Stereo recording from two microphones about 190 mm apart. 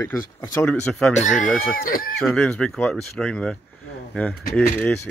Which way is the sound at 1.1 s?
40° left (ahead or behind).